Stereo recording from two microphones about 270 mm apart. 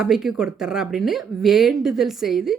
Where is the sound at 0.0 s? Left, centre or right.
Centre.